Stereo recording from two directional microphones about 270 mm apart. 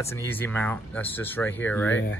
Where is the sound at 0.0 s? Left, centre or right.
Centre.